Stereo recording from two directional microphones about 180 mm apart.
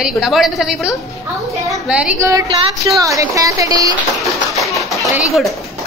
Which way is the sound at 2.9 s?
20° right (ahead or behind).